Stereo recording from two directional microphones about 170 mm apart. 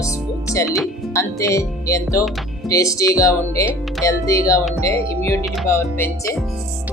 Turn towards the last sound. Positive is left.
turn(degrees=15)  # may be behind; listen again after turning